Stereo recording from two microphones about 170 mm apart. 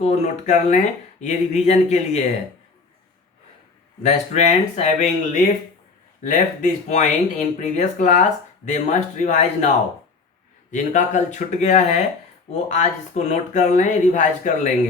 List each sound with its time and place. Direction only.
0.0 s speech: 40° left (ahead or behind)
4.0 s speech: 40° left (ahead or behind)